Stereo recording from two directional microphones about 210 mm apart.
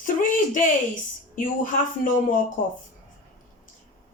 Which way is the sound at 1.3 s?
40° left (ahead or behind).